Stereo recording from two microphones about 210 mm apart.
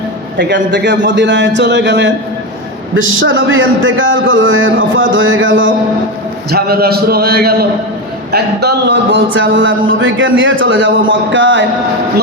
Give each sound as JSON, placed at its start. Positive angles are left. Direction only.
{"t": 0.3, "sound": "a man's voice", "side_deg": -55}
{"t": 6.5, "sound": "a man's voice", "side_deg": -50}